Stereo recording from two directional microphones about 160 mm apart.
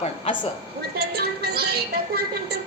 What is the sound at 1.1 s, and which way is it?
Music, 80° right.